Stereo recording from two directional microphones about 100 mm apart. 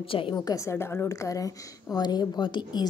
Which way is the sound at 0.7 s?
25° left (ahead or behind).